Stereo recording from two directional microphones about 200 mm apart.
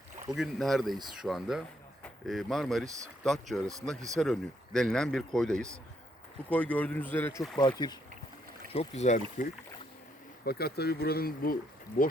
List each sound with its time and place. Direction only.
0.3 s a man's voice: centre (ahead or behind)
7.8 s speech: 20° left (ahead or behind)
8.7 s speech: 35° left (ahead or behind)
10.4 s speech: 50° left (ahead or behind)